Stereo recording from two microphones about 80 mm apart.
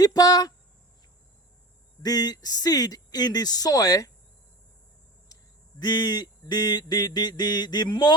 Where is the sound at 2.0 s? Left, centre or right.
Left.